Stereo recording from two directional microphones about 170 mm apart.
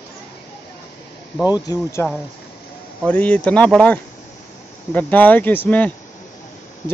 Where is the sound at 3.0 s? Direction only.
10° left (ahead or behind).